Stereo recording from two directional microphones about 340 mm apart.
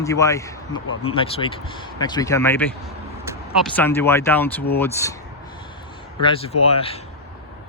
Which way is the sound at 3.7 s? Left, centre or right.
Centre.